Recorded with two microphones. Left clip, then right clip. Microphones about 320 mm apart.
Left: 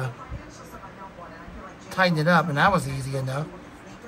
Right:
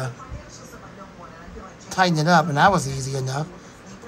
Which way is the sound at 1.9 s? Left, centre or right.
Centre.